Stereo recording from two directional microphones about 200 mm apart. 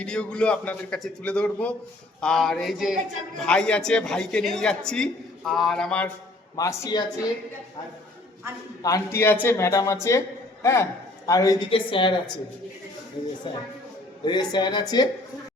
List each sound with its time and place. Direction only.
0.0 s a man's voice: 5° left (ahead or behind)
6.6 s a man's voice: 15° left (ahead or behind)
8.8 s a man's voice: 15° left (ahead or behind)
14.3 s speech: 20° left (ahead or behind)